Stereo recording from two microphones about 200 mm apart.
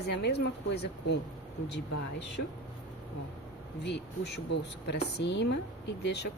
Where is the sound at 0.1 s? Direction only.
55° left (ahead or behind).